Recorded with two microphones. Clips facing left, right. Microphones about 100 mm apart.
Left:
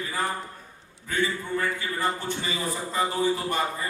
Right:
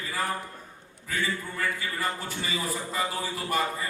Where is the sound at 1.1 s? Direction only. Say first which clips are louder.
Left 4 dB; 30° left (ahead or behind).